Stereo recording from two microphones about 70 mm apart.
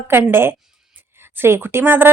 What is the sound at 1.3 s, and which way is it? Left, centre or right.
Speech, right.